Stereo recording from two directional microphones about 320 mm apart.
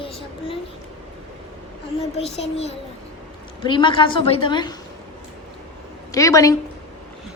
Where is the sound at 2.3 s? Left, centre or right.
Centre.